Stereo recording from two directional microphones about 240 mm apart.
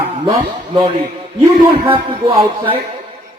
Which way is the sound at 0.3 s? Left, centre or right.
Right.